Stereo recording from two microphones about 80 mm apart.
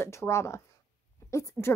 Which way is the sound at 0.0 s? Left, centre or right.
Left.